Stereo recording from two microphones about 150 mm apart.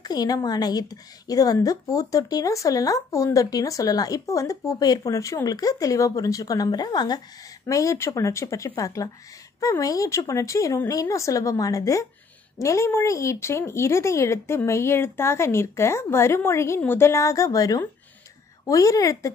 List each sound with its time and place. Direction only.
0.0 s a woman's voice: 25° left (ahead or behind)